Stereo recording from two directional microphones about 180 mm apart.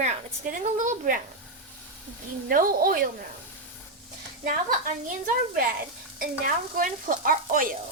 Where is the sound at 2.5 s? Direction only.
50° right (ahead or behind).